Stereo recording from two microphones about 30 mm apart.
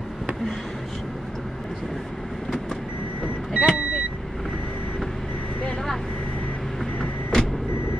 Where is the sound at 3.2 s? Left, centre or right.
Right.